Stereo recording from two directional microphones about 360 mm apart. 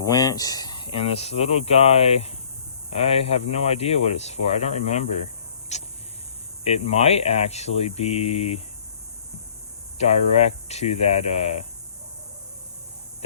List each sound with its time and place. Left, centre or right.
0.0 s speech: centre
5.7 s a sound: centre
6.8 s speech: centre
10.0 s speech: centre